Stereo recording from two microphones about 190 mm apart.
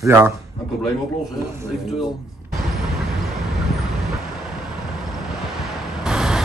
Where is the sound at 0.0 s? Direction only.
15° right (ahead or behind).